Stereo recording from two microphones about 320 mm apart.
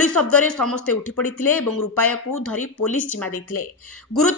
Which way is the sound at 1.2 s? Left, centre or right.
Left.